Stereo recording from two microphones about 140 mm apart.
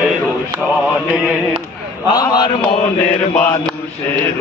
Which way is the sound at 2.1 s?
30° left (ahead or behind).